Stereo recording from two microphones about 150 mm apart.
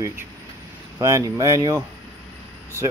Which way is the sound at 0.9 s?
20° right (ahead or behind).